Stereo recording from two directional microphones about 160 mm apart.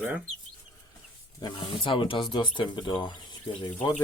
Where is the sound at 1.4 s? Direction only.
30° left (ahead or behind).